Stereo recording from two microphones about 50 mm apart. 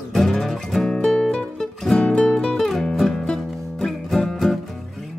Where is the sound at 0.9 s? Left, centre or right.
Centre.